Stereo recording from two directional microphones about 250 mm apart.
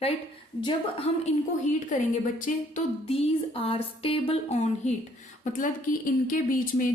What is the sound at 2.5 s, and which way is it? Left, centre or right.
A woman's voice, left.